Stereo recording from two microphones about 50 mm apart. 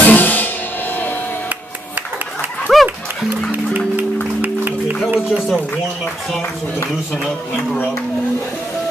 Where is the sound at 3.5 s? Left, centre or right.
Right.